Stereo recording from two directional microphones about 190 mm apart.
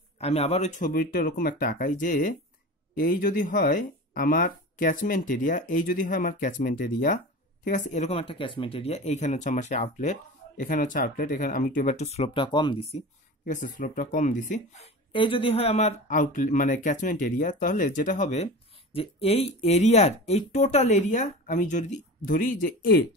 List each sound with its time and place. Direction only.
0.2 s speech: 35° left (ahead or behind)
13.5 s speech: 45° left (ahead or behind)
15.1 s speech: 30° left (ahead or behind); by 23.0 s 50° left (ahead or behind)